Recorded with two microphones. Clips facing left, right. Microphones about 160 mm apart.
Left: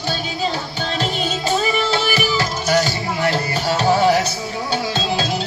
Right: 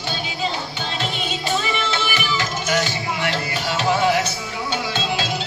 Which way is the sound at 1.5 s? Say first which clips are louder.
Left 4 dB; 40° left (ahead or behind).